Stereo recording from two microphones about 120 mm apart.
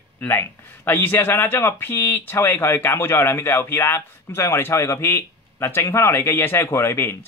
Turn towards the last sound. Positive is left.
turn(degrees=20)  # may be behind; listen again after turning